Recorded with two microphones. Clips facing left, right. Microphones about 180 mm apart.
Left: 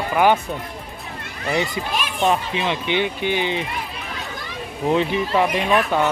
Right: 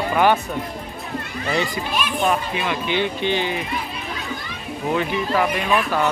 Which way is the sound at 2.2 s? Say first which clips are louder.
Left 3 dB; 25° left (ahead or behind).